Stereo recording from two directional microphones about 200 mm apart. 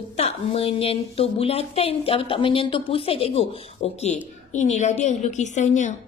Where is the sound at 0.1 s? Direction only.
30° left (ahead or behind).